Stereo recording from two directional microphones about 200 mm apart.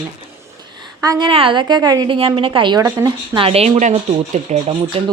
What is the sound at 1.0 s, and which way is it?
A woman's voice, 20° right (ahead or behind).